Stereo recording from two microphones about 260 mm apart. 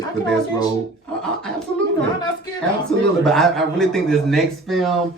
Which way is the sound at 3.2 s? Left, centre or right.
Centre.